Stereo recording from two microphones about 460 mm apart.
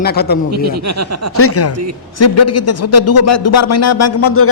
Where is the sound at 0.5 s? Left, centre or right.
Right.